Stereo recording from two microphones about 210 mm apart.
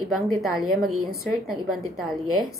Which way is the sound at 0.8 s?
90° right.